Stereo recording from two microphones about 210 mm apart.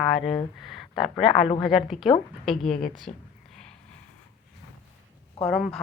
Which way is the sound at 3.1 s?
35° left (ahead or behind).